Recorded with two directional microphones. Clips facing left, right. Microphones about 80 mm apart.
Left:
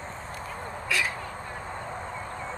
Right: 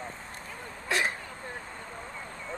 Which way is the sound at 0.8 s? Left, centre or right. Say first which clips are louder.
Right 1 dB; right.